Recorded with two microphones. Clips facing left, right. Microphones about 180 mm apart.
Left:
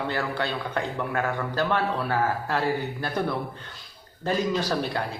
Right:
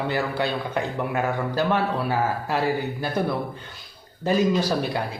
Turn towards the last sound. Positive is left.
turn(degrees=-10)  # may be behind; listen again after turning